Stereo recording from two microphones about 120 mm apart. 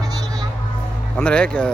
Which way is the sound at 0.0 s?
30° right (ahead or behind).